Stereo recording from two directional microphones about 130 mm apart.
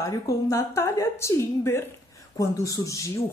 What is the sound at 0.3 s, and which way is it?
Speech, 25° left (ahead or behind).